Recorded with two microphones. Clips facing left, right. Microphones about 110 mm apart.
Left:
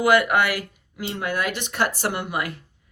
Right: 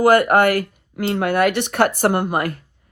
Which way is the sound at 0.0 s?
45° right (ahead or behind).